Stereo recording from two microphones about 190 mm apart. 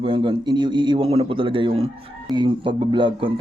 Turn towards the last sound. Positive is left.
turn(degrees=-25)  # may be behind; listen again after turning